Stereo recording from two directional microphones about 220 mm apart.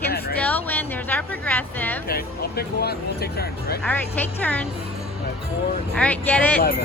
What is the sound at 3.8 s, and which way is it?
Speech, 5° left (ahead or behind).